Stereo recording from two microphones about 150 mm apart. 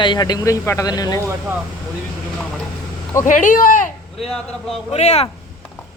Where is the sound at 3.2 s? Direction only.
60° left (ahead or behind).